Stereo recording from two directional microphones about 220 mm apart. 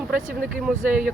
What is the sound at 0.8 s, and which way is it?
Speech, 40° right (ahead or behind).